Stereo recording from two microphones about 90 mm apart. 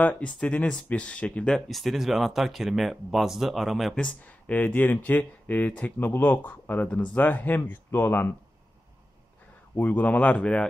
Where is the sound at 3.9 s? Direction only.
15° left (ahead or behind).